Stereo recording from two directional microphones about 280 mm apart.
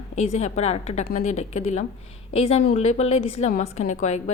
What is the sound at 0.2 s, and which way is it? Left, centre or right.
A woman's voice, left.